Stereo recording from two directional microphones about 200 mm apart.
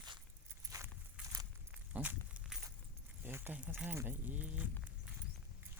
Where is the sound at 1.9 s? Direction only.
10° right (ahead or behind).